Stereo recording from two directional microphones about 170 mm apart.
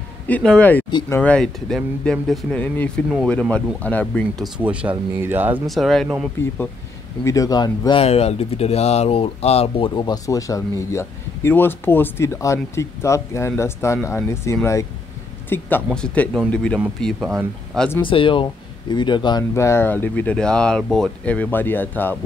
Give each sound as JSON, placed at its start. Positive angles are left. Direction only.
{"t": 0.3, "sound": "speech", "side_deg": 5}
{"t": 4.6, "sound": "speech", "side_deg": -10}
{"t": 5.7, "sound": "speech", "side_deg": 0}
{"t": 7.2, "sound": "speech", "side_deg": 20}
{"t": 8.0, "sound": "speech", "side_deg": 35}
{"t": 18.0, "sound": "speech", "side_deg": 30}
{"t": 19.5, "sound": "speech", "side_deg": 15}